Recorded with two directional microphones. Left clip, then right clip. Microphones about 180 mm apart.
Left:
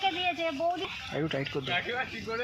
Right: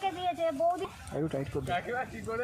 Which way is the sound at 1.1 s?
Centre (ahead or behind).